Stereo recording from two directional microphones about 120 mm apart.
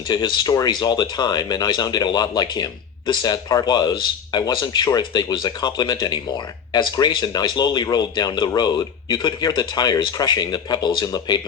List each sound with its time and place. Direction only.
0.1 s speech: 35° left (ahead or behind)